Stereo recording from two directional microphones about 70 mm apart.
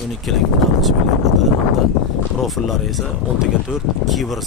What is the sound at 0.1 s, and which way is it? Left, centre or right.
Speech, centre.